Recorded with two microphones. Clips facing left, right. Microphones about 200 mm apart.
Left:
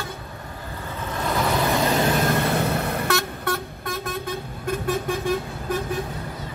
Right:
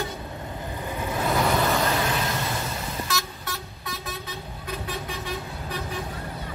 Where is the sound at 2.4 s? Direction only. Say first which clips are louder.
Left 8 dB; 60° left (ahead or behind).